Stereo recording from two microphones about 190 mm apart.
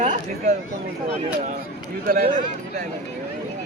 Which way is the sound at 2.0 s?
50° right (ahead or behind).